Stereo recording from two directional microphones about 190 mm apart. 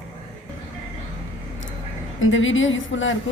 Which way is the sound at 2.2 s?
90° left.